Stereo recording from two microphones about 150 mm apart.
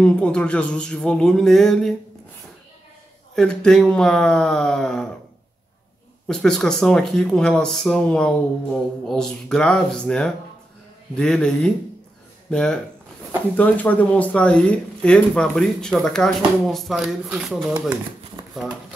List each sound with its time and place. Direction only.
0.0 s speech: 5° left (ahead or behind)
3.3 s speech: 5° left (ahead or behind)
6.2 s speech: 5° left (ahead or behind)
18.4 s a sound: 30° right (ahead or behind)